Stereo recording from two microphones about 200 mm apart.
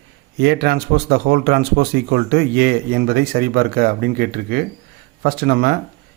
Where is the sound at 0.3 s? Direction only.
55° right (ahead or behind).